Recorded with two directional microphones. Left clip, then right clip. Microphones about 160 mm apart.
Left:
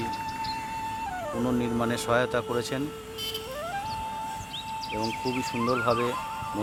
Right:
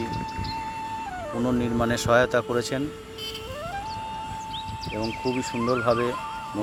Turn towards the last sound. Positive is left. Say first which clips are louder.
# right 2 dB
turn(degrees=-5)  # may be behind; listen again after turning